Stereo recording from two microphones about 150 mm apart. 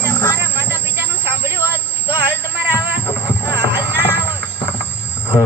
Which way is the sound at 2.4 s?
15° left (ahead or behind).